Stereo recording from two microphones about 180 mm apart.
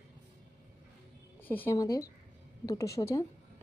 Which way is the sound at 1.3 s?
10° left (ahead or behind).